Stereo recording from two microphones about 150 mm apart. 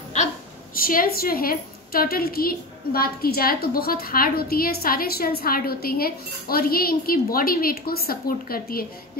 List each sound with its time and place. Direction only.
0.7 s a woman's voice: 70° left (ahead or behind)